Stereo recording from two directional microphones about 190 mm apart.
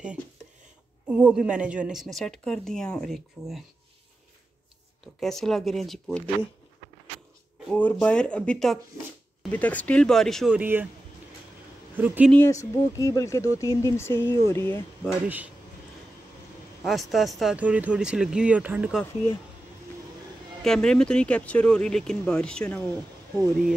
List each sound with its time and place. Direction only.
1.0 s a woman's voice: 5° right (ahead or behind)
5.0 s a woman's voice: centre (ahead or behind)
7.6 s a woman's voice: 5° left (ahead or behind); by 10.9 s 10° right (ahead or behind)
12.3 s speech: 15° left (ahead or behind)
15.2 s speech: 10° right (ahead or behind)
16.8 s a woman's voice: centre (ahead or behind)
20.6 s a woman's voice: 5° left (ahead or behind)